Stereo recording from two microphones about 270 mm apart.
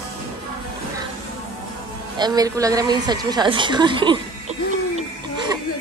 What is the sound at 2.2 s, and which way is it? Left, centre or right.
A woman's voice, centre.